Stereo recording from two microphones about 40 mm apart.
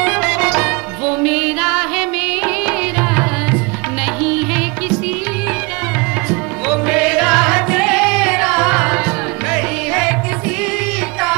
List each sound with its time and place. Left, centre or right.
0.0 s music: centre
6.7 s music: centre